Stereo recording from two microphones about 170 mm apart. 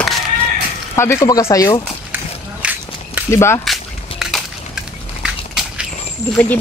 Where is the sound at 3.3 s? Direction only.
15° left (ahead or behind).